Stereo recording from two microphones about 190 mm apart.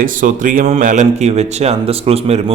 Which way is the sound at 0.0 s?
45° right (ahead or behind).